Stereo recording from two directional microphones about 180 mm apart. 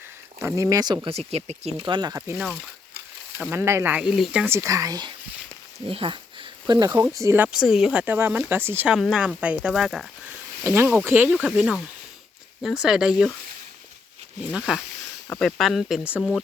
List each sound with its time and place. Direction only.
0.3 s speech: 20° right (ahead or behind)
1.3 s speech: 35° right (ahead or behind)
1.8 s speech: 25° right (ahead or behind)
2.3 s speech: centre (ahead or behind)
3.3 s speech: 15° right (ahead or behind)
10.6 s speech: 15° right (ahead or behind)
12.8 s speech: 5° right (ahead or behind)
14.5 s speech: centre (ahead or behind)